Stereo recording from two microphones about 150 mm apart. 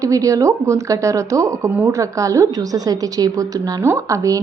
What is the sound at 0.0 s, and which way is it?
Speech, 20° right (ahead or behind).